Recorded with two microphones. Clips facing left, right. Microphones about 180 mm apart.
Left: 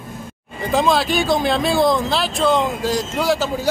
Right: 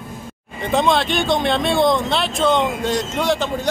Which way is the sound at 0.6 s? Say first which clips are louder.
Even; centre (ahead or behind).